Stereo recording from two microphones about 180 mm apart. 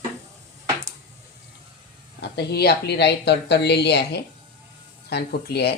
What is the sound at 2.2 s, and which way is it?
Speech, 65° left (ahead or behind).